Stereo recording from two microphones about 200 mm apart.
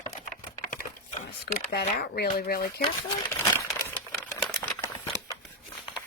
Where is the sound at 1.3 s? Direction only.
55° left (ahead or behind).